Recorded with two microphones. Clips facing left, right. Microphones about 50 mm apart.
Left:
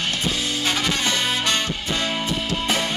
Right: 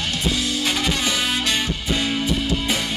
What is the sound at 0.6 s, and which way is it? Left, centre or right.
Music, centre.